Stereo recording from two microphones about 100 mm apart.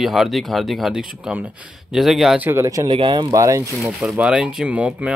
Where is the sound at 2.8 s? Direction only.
55° right (ahead or behind).